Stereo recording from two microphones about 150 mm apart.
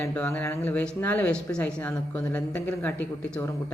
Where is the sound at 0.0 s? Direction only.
15° left (ahead or behind).